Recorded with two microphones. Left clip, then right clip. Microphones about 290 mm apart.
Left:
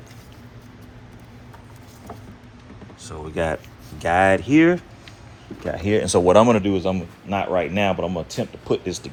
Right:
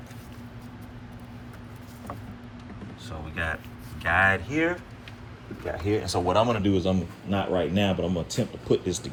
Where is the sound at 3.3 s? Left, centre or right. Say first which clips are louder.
Left 7 dB; centre.